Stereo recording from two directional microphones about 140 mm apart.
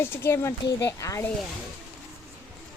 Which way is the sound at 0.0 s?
15° left (ahead or behind).